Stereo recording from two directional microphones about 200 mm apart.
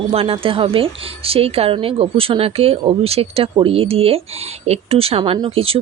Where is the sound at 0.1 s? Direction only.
30° right (ahead or behind).